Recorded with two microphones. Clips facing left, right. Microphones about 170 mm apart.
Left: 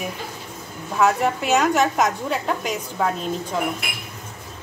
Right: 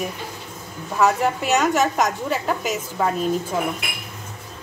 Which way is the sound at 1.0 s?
Centre (ahead or behind).